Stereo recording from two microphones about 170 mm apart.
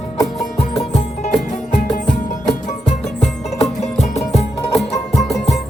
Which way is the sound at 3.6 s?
40° left (ahead or behind).